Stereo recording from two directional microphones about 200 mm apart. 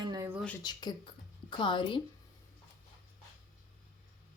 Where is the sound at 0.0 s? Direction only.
20° right (ahead or behind).